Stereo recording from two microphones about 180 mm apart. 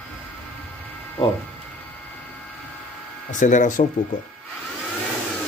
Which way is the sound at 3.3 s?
45° left (ahead or behind).